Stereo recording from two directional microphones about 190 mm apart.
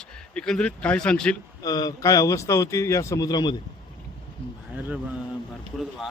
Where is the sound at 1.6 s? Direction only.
20° left (ahead or behind).